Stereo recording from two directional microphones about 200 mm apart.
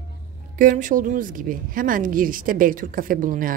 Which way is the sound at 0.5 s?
40° right (ahead or behind).